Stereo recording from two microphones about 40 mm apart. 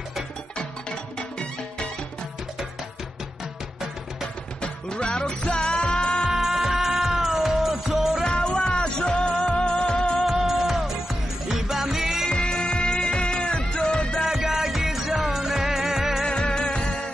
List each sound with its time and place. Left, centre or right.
4.6 s music: left
6.3 s music: centre
8.2 s music: centre
10.2 s music: centre
12.3 s music: left
14.3 s music: centre
16.3 s music: left